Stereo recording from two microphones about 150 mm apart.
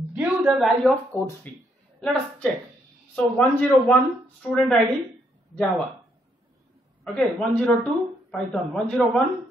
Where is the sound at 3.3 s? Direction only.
15° left (ahead or behind).